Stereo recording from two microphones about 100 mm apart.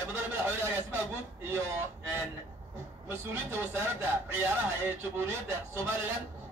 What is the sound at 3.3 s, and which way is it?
Speech, 25° right (ahead or behind).